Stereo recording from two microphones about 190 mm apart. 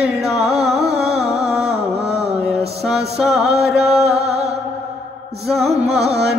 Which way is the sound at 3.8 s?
35° right (ahead or behind).